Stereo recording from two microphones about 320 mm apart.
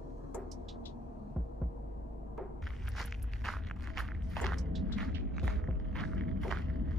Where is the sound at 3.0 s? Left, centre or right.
Centre.